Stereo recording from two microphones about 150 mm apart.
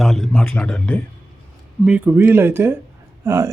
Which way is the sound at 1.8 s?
10° right (ahead or behind).